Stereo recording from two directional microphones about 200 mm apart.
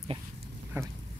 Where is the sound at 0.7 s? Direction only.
10° right (ahead or behind).